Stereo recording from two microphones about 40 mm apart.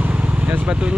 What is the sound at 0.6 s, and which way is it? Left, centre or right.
Speech, right.